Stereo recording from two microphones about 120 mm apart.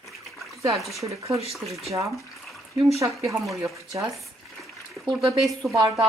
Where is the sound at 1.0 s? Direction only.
25° right (ahead or behind).